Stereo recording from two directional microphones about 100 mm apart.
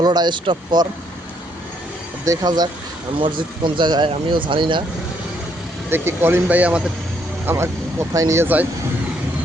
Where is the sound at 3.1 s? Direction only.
55° right (ahead or behind).